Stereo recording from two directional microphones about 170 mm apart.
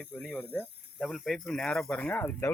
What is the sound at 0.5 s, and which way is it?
Speech, 5° right (ahead or behind).